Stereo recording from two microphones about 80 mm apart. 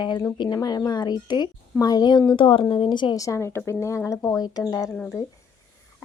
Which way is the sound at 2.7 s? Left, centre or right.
Left.